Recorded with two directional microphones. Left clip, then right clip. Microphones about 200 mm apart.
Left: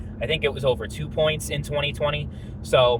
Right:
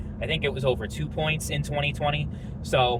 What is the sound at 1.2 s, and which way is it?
Speech, 30° left (ahead or behind).